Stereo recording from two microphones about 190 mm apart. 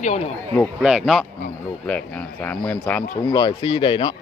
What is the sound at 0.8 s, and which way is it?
A man's voice, 5° right (ahead or behind).